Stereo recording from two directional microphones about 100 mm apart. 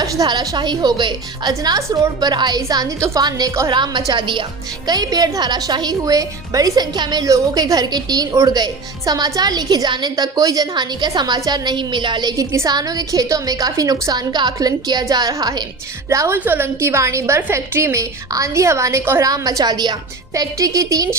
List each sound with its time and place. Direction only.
0.0 s a woman's voice: 40° right (ahead or behind)
12.4 s a woman's voice: 35° right (ahead or behind)
16.0 s a woman's voice: 25° right (ahead or behind)